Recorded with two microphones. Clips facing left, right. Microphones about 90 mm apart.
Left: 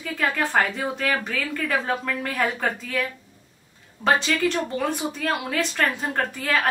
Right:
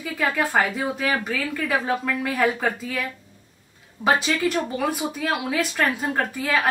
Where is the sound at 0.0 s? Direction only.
5° right (ahead or behind).